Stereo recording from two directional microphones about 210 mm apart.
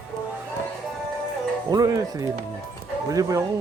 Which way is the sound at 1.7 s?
15° right (ahead or behind).